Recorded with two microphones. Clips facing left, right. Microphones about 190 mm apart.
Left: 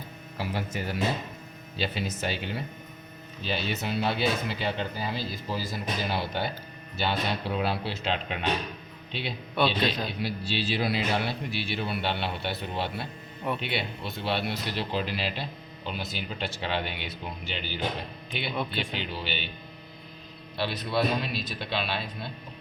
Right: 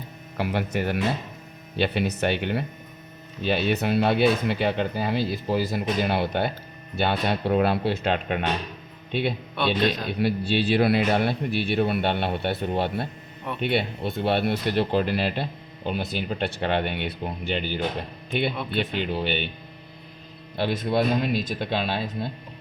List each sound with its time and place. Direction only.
0.3 s speech: 60° right (ahead or behind)
9.6 s a man's voice: centre (ahead or behind)
10.1 s speech: 55° right (ahead or behind)
20.6 s speech: 50° right (ahead or behind)